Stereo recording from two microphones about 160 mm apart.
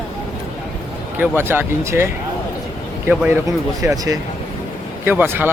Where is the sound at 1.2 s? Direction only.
15° right (ahead or behind).